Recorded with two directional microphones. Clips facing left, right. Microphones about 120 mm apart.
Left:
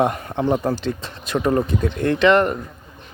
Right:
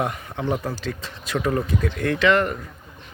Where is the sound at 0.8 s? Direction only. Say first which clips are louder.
Left 5 dB; 25° left (ahead or behind).